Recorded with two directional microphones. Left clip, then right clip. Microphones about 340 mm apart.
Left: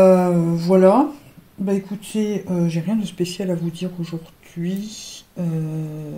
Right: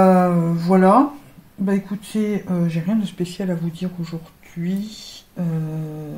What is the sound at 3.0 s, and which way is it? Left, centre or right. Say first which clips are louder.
Speech: left 2 dB; left.